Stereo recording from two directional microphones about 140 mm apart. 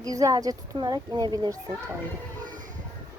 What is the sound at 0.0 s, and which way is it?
A woman's voice, 25° right (ahead or behind).